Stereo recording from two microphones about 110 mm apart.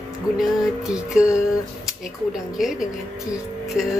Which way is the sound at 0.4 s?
5° right (ahead or behind).